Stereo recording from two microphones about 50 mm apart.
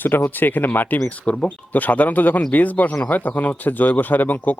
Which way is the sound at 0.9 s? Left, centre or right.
Left.